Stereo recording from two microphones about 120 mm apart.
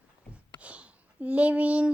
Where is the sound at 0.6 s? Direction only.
10° right (ahead or behind).